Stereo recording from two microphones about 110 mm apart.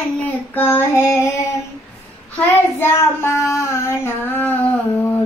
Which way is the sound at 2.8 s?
25° left (ahead or behind).